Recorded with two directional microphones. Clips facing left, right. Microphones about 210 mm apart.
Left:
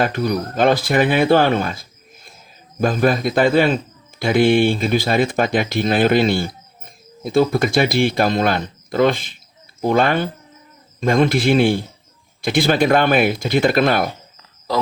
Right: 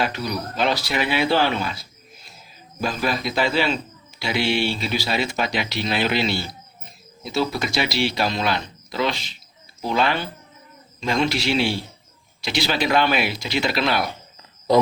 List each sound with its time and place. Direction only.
0.0 s speech: 50° left (ahead or behind)